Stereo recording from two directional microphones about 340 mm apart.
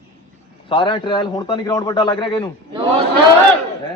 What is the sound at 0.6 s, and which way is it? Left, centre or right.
A man's voice, centre.